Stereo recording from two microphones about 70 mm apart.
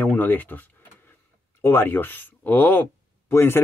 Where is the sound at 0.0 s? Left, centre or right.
Left.